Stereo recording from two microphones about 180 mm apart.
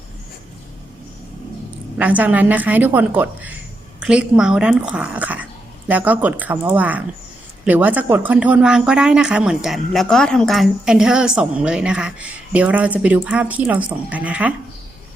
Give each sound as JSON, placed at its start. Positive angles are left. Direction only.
{"t": 2.0, "sound": "a woman's voice", "side_deg": -10}